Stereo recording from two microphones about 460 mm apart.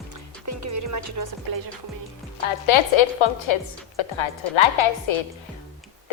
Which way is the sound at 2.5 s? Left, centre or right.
Left.